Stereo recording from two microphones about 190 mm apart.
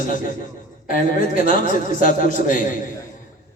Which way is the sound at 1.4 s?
45° left (ahead or behind).